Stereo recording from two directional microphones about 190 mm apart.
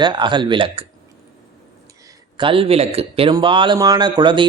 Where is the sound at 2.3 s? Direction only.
25° right (ahead or behind).